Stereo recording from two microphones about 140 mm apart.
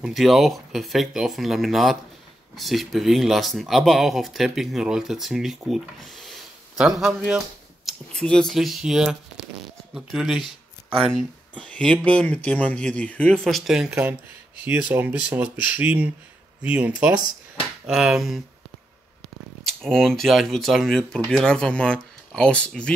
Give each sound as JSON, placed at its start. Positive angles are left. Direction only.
{"t": 0.0, "sound": "speech", "side_deg": 0}
{"t": 19.6, "sound": "speech", "side_deg": 5}